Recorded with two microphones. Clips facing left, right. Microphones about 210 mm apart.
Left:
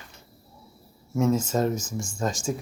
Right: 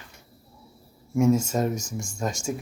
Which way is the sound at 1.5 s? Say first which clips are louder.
Left 1 dB; 20° right (ahead or behind).